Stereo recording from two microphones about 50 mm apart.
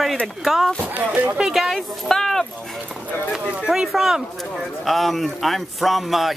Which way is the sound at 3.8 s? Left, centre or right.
Centre.